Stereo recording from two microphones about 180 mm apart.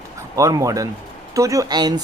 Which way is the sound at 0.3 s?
20° right (ahead or behind).